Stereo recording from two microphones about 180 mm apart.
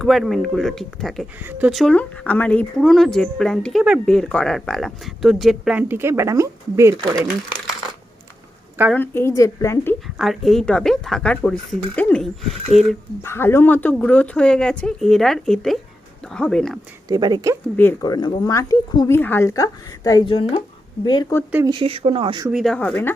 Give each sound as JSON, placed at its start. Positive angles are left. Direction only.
{"t": 0.0, "sound": "speech", "side_deg": 0}
{"t": 1.5, "sound": "speech", "side_deg": -10}
{"t": 1.7, "sound": "speech", "side_deg": 5}
{"t": 8.9, "sound": "a woman's voice", "side_deg": 10}
{"t": 10.2, "sound": "speech", "side_deg": 0}
{"t": 13.2, "sound": "speech", "side_deg": 15}
{"t": 17.1, "sound": "speech", "side_deg": -25}
{"t": 18.0, "sound": "speech", "side_deg": 20}
{"t": 21.7, "sound": "speech", "side_deg": -30}
{"t": 22.5, "sound": "speech", "side_deg": 5}